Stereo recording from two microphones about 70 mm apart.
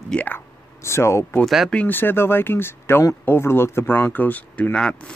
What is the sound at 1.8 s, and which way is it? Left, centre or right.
Speech, left.